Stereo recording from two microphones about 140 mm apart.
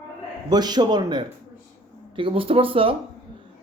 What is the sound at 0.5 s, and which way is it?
A man's voice, 30° right (ahead or behind).